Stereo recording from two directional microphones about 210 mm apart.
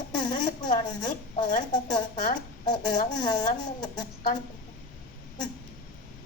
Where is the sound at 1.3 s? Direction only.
30° left (ahead or behind).